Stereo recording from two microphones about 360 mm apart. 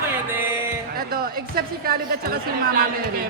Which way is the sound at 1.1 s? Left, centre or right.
Right.